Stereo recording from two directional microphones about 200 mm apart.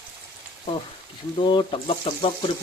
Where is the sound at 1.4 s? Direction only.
25° left (ahead or behind).